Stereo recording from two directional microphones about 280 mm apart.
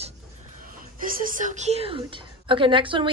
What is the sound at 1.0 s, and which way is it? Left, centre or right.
A woman's voice, right.